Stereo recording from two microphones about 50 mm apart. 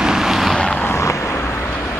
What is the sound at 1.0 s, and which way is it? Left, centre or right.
Vehicle, left.